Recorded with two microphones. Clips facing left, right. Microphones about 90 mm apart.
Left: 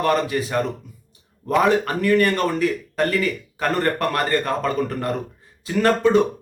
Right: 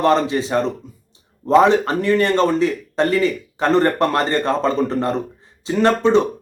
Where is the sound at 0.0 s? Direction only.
25° right (ahead or behind).